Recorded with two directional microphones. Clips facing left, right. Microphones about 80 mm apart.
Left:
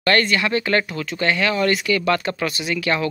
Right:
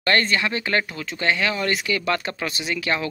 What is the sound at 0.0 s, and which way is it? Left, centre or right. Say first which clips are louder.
Speech: left 2 dB; right.